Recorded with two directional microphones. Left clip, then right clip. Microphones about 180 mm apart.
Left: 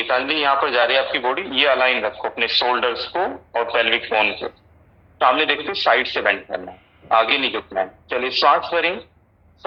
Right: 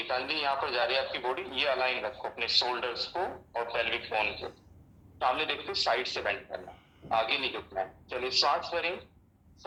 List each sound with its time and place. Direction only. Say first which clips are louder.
0.0 s speech: left 12 dB; 25° left (ahead or behind)